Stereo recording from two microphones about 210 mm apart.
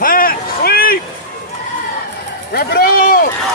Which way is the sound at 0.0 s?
45° left (ahead or behind).